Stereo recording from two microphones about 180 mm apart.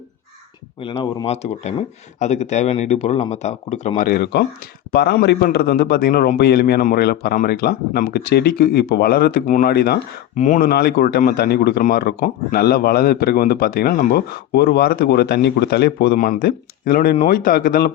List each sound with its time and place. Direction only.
0.8 s speech: 30° left (ahead or behind)
4.0 s a man's voice: 60° left (ahead or behind)
10.3 s speech: 40° left (ahead or behind)
10.7 s a man's voice: 60° left (ahead or behind)
16.1 s a man's voice: 45° left (ahead or behind)